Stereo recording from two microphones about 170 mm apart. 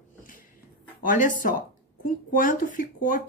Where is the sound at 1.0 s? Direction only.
50° left (ahead or behind).